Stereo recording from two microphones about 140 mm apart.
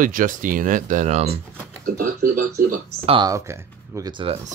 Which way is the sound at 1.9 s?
75° right (ahead or behind).